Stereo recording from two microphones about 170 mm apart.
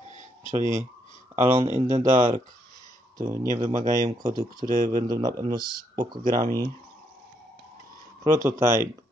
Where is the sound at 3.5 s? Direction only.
20° right (ahead or behind).